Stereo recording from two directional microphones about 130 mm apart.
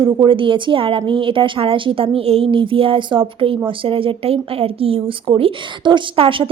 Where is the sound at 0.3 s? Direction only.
40° right (ahead or behind).